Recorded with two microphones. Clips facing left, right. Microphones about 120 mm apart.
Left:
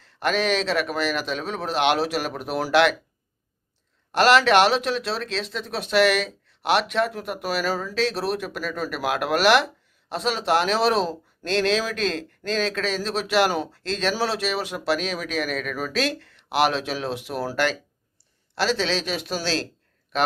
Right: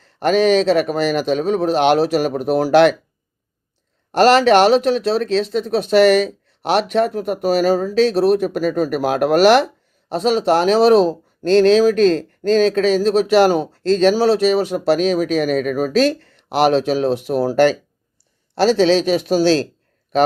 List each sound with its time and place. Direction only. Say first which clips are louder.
0.0 s speech: right 9 dB; 40° right (ahead or behind)
4.1 s speech: right 5 dB; 40° right (ahead or behind)